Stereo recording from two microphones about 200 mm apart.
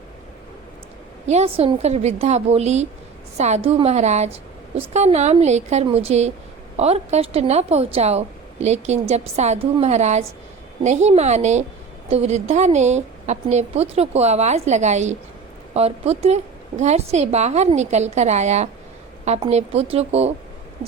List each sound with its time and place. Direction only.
1.3 s a woman's voice: 30° right (ahead or behind)